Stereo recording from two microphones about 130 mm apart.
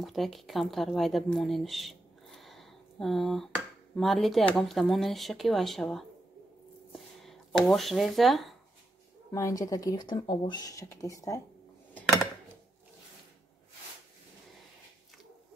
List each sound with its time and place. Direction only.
0.0 s speech: centre (ahead or behind)
6.9 s a sound: centre (ahead or behind)
9.3 s speech: 25° left (ahead or behind)